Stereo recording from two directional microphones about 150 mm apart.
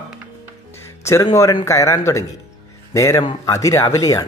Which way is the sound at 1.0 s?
20° left (ahead or behind).